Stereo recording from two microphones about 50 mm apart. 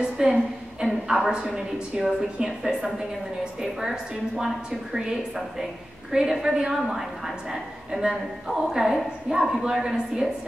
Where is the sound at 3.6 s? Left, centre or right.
Centre.